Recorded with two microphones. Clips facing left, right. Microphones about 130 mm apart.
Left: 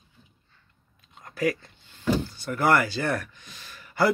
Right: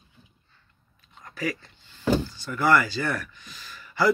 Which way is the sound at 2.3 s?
60° left (ahead or behind).